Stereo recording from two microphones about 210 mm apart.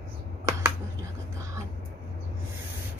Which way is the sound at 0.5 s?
15° right (ahead or behind).